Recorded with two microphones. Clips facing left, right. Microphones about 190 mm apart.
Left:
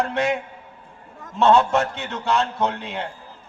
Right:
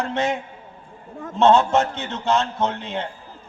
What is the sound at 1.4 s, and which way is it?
A man's voice, 20° right (ahead or behind).